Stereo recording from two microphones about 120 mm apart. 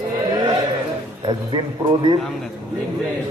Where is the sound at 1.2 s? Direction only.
40° right (ahead or behind).